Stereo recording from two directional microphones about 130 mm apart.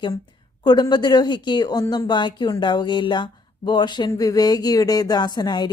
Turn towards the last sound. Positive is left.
turn(degrees=30)  # may be behind; listen again after turning